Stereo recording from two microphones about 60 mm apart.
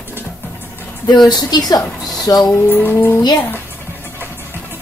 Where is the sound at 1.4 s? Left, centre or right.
Left.